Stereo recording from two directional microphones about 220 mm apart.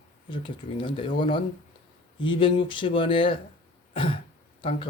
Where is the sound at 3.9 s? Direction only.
25° left (ahead or behind).